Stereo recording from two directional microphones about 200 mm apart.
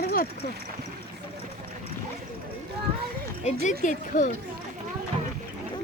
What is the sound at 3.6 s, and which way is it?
Speech, 40° left (ahead or behind).